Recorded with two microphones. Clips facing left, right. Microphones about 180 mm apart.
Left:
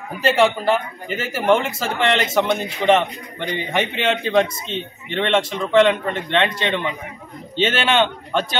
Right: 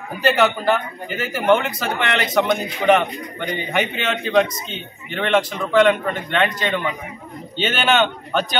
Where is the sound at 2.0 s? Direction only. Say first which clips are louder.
Left 1 dB; 30° left (ahead or behind).